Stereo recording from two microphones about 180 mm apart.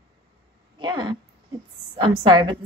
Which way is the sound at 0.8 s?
25° right (ahead or behind).